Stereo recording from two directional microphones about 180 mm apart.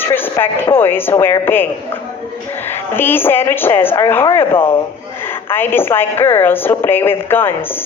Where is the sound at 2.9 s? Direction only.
10° left (ahead or behind).